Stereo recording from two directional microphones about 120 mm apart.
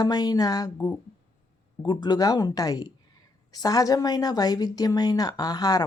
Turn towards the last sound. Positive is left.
turn(degrees=35)  # may be behind; listen again after turning